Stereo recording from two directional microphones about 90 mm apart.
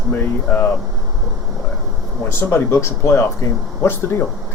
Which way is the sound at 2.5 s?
30° left (ahead or behind).